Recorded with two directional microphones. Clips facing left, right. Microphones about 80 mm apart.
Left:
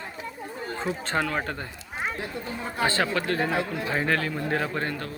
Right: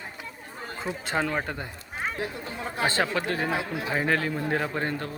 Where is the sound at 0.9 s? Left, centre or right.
Centre.